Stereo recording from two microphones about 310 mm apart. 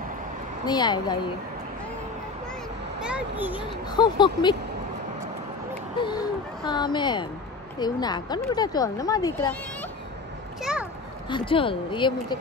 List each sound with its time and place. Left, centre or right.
0.7 s speech: centre
3.0 s a child's voice: centre
3.5 s speech: centre
5.9 s speech: centre
10.6 s a sound: centre
11.2 s speech: centre